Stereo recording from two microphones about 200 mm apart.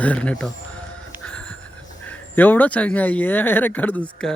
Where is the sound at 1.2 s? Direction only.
5° left (ahead or behind).